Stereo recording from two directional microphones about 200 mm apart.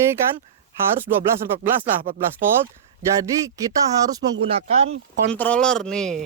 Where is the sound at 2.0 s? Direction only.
45° right (ahead or behind).